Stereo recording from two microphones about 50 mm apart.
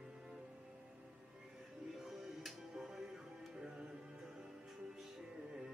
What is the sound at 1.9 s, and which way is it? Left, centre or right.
Music, centre.